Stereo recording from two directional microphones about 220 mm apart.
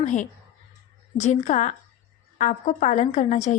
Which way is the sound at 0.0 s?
35° left (ahead or behind).